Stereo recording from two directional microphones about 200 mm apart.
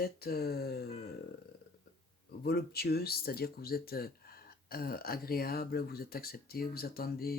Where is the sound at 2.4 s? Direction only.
50° left (ahead or behind).